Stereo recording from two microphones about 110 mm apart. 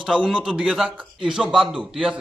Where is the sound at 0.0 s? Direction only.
5° right (ahead or behind).